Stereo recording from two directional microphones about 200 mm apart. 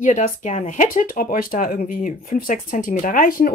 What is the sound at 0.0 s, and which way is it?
A woman's voice, 40° left (ahead or behind).